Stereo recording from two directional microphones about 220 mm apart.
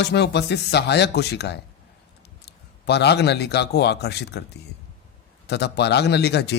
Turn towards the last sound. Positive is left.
turn(degrees=50)  # may be behind; listen again after turning